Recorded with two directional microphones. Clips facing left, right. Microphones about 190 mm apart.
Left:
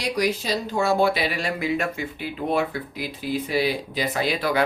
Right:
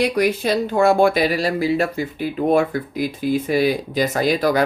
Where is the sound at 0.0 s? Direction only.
55° right (ahead or behind).